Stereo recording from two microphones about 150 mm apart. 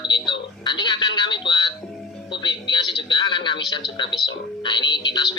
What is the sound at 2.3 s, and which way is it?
Speech, 30° left (ahead or behind).